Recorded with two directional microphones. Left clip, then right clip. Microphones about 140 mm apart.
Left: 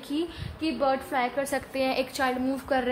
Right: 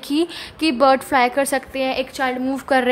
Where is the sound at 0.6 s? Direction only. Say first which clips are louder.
Right 11 dB; 65° right (ahead or behind).